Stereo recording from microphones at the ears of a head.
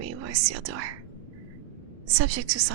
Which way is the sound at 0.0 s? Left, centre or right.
Right.